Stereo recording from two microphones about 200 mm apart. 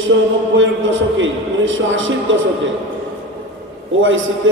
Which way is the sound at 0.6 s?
70° right (ahead or behind).